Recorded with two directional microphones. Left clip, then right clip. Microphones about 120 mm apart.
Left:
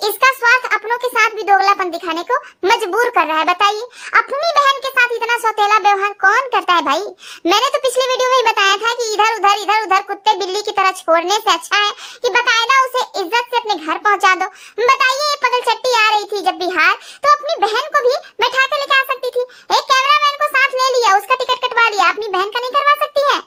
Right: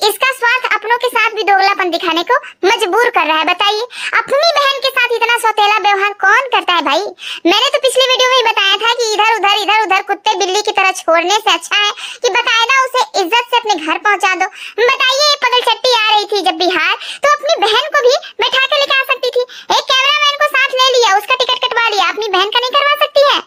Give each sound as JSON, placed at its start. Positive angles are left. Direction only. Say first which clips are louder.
{"t": 0.0, "sound": "a child's voice", "louder": "right 1 dB", "side_deg": -15}
{"t": 13.3, "sound": "a child's voice", "louder": "right 3 dB", "side_deg": -25}
{"t": 13.9, "sound": "a child's voice", "louder": "left 1 dB", "side_deg": -5}